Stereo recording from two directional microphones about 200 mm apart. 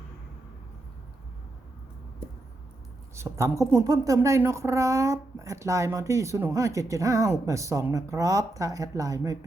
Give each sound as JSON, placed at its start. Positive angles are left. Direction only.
{"t": 3.2, "sound": "a woman's voice", "side_deg": -15}